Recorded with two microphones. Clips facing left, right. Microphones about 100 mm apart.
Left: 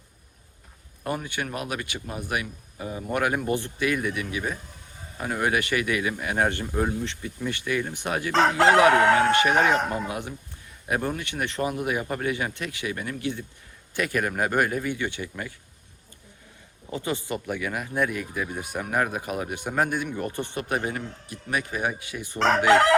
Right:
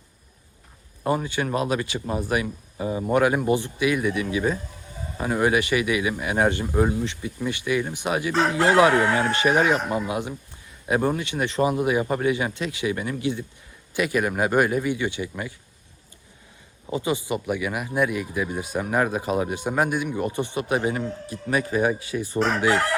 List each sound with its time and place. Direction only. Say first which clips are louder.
1.0 s speech: right 6 dB; 25° right (ahead or behind)
8.9 s speech: left 2 dB; 60° left (ahead or behind)
9.4 s speech: right 1 dB; 20° right (ahead or behind)
16.8 s speech: right 4 dB; 15° right (ahead or behind)
21.5 s speech: right 6 dB; 35° right (ahead or behind)
22.4 s chicken: left 6 dB; 75° left (ahead or behind)